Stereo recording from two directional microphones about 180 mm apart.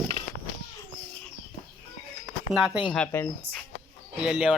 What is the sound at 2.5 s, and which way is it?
Speech, 5° right (ahead or behind).